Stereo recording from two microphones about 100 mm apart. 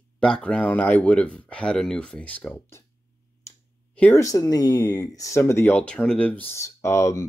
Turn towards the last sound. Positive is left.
turn(degrees=30)  # may be behind; listen again after turning